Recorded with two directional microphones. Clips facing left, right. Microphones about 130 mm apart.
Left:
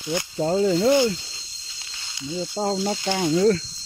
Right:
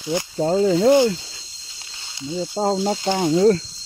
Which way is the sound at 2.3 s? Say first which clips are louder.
Right 4 dB; 45° right (ahead or behind).